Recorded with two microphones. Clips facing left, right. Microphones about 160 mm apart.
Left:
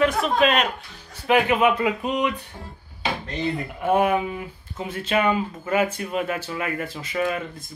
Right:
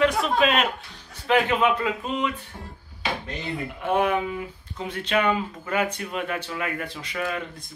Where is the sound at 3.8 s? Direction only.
5° left (ahead or behind).